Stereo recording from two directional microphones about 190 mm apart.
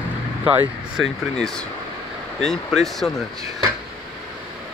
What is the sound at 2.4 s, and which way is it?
Speech, centre (ahead or behind).